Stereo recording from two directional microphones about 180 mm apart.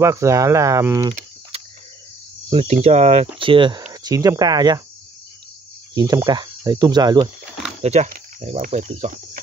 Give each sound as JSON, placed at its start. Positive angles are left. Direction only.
{"t": 0.0, "sound": "speech", "side_deg": -15}
{"t": 1.5, "sound": "cricket", "side_deg": -35}
{"t": 2.5, "sound": "speech", "side_deg": -35}
{"t": 3.3, "sound": "cricket", "side_deg": -30}
{"t": 3.9, "sound": "speech", "side_deg": -20}
{"t": 5.9, "sound": "cricket", "side_deg": -20}
{"t": 7.8, "sound": "speech", "side_deg": -35}